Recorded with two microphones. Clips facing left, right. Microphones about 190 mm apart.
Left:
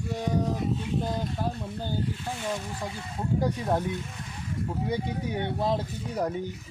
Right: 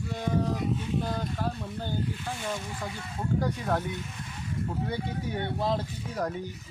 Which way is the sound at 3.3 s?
20° left (ahead or behind).